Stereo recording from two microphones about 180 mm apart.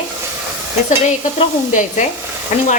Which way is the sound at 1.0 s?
45° left (ahead or behind).